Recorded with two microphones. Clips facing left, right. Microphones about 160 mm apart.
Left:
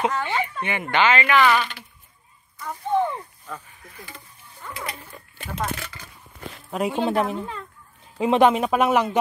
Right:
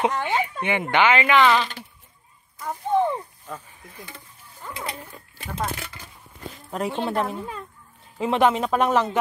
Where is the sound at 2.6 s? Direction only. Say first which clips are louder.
Right 1 dB; 25° right (ahead or behind).